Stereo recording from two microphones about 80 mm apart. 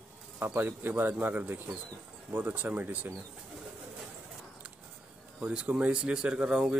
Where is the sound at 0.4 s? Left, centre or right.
Right.